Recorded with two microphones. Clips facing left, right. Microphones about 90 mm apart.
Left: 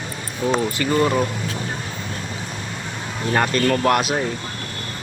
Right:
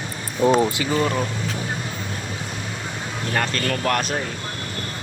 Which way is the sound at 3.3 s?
15° left (ahead or behind).